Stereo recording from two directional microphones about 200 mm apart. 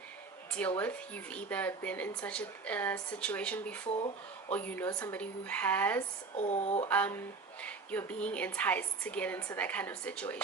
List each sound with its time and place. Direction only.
0.8 s speech: 5° left (ahead or behind)
3.8 s speech: 30° left (ahead or behind)
4.4 s speech: 10° left (ahead or behind)
6.3 s speech: 35° left (ahead or behind)
6.8 s speech: 10° left (ahead or behind)